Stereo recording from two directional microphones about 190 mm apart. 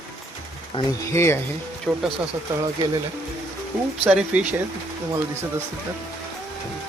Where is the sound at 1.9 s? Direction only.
Centre (ahead or behind).